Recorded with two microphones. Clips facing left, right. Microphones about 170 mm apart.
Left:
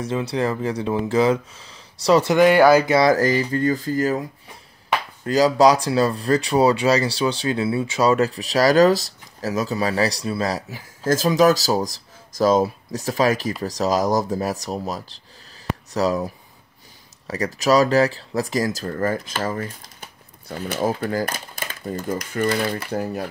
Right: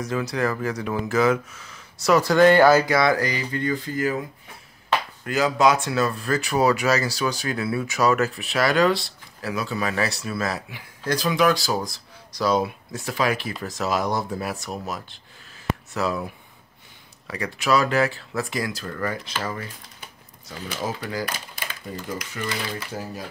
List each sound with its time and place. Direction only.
0.0 s speech: 30° left (ahead or behind)
2.3 s speech: 10° left (ahead or behind)
2.9 s speech: 35° left (ahead or behind)
5.2 s speech: 35° left (ahead or behind)
17.3 s speech: 40° left (ahead or behind); by 23.2 s 60° left (ahead or behind)